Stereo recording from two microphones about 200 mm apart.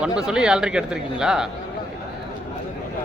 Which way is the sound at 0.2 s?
5° right (ahead or behind).